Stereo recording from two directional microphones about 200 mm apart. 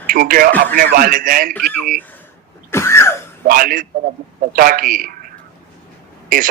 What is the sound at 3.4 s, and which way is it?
A man's voice, 45° right (ahead or behind).